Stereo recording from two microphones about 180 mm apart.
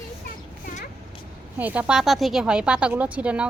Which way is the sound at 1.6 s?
10° right (ahead or behind).